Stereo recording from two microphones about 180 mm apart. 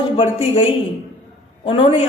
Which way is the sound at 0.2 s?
30° left (ahead or behind).